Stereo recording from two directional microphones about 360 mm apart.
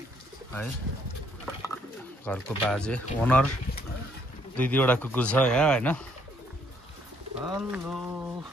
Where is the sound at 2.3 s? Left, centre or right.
Centre.